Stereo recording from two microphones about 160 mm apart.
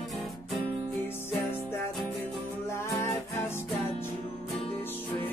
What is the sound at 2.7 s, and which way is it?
Music, 15° left (ahead or behind).